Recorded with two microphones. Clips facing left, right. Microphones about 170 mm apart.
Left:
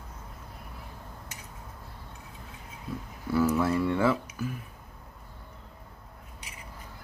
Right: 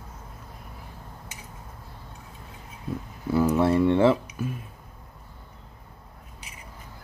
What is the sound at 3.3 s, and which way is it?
Speech, 30° right (ahead or behind).